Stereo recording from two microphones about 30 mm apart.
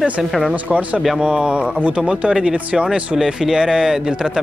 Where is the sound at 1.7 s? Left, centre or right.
Right.